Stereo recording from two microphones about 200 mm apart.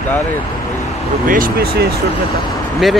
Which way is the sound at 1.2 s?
45° right (ahead or behind).